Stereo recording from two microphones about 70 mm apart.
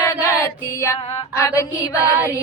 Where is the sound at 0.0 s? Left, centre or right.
Left.